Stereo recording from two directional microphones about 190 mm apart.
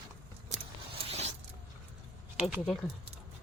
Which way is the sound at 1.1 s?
35° right (ahead or behind).